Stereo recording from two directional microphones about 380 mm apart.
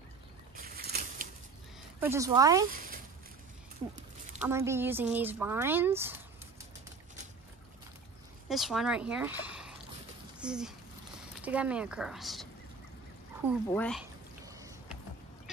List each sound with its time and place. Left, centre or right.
0.6 s a sound: right
2.0 s speech: centre
2.7 s a sound: right
4.4 s speech: centre
8.5 s speech: centre
13.7 s speech: centre
14.4 s boat: centre